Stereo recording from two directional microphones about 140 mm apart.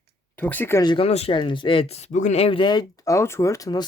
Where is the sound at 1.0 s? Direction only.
45° left (ahead or behind).